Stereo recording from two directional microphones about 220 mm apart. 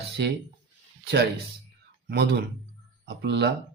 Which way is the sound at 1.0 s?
45° right (ahead or behind).